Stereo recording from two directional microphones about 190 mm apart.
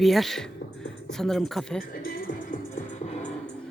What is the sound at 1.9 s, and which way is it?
Music, 50° left (ahead or behind).